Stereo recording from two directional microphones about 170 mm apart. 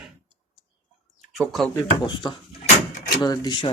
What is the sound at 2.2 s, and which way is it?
Speech, 25° left (ahead or behind).